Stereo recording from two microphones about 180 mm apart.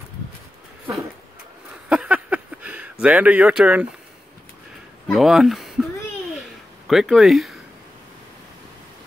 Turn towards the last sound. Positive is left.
turn(degrees=0)  # may be behind; listen again after turning